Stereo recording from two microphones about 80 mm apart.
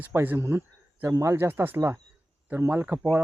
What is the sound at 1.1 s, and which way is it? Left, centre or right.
Speech, right.